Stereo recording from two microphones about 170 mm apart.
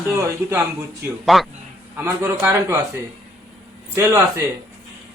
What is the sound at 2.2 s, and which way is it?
Speech, 15° right (ahead or behind).